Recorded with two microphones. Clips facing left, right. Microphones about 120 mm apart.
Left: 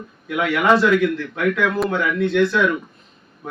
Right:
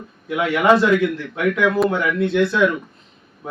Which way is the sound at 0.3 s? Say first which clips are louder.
Right 1 dB; 15° right (ahead or behind).